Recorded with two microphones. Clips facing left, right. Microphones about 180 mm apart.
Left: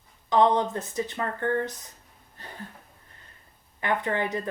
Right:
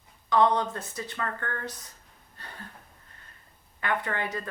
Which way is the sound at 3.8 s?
20° left (ahead or behind).